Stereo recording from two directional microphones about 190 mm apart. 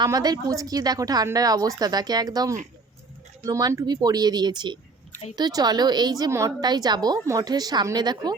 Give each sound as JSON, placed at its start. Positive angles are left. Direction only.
{"t": 0.0, "sound": "a woman's voice", "side_deg": -20}